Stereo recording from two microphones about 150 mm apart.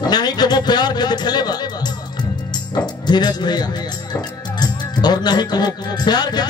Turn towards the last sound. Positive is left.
turn(degrees=30)  # may be behind; listen again after turning